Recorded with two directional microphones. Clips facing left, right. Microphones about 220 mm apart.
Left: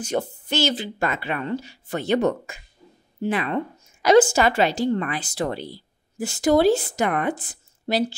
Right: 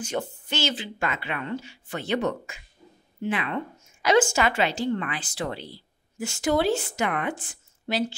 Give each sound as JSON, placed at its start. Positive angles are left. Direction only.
{"t": 0.0, "sound": "speech", "side_deg": 40}